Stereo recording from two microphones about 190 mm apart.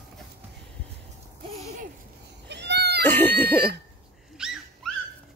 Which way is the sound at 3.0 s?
10° left (ahead or behind).